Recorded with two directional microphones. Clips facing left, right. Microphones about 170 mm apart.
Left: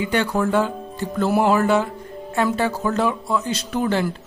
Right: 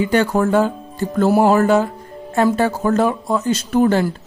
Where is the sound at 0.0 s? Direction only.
45° right (ahead or behind).